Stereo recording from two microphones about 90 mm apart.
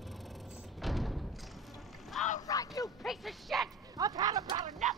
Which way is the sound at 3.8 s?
45° right (ahead or behind).